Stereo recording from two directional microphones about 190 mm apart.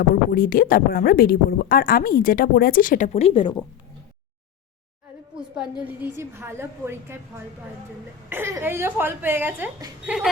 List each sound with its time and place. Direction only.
0.0 s speech: 50° left (ahead or behind); by 3.5 s 30° left (ahead or behind)
5.4 s a woman's voice: 5° right (ahead or behind)